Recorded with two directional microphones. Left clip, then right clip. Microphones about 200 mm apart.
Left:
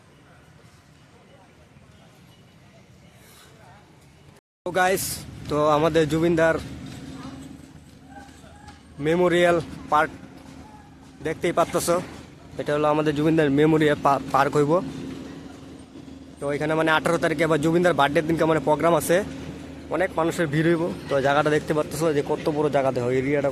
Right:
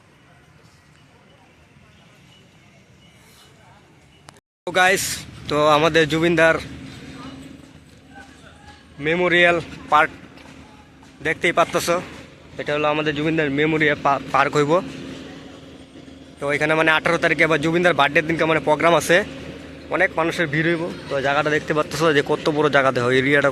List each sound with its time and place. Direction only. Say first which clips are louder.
4.6 s speech: right 5 dB; 5° left (ahead or behind)
9.0 s a man's voice: right 3 dB; 20° left (ahead or behind)
11.2 s speech: right 4 dB; 10° left (ahead or behind)
12.5 s a man's voice: right 1 dB; 20° left (ahead or behind)
16.4 s speech: right 5 dB; centre (ahead or behind); by 21.8 s 20° left (ahead or behind)
22.0 s speech: right 6 dB; centre (ahead or behind)